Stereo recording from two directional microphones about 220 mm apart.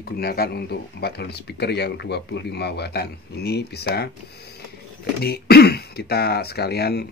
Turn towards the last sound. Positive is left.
turn(degrees=45)  # may be behind; listen again after turning